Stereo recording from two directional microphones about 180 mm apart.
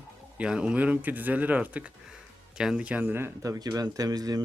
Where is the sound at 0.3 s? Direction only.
5° right (ahead or behind).